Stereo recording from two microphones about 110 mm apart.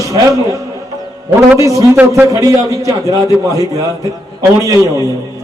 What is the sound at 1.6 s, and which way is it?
A man's voice, 30° right (ahead or behind).